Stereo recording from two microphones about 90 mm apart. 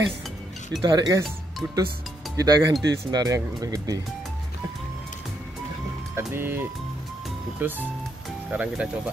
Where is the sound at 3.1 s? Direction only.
45° right (ahead or behind).